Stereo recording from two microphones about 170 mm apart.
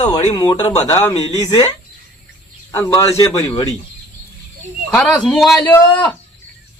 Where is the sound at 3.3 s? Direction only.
20° left (ahead or behind).